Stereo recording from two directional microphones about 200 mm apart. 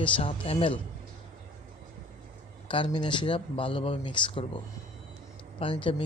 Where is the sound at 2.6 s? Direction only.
25° left (ahead or behind).